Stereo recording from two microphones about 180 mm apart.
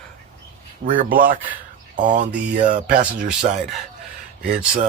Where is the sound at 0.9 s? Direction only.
50° right (ahead or behind).